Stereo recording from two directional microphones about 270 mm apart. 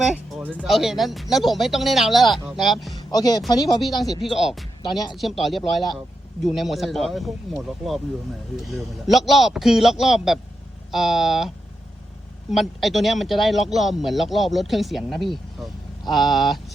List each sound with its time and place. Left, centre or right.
0.0 s speech: centre
3.1 s speech: centre
3.8 s speech: centre
4.8 s speech: centre
5.1 s speech: centre
8.6 s speech: centre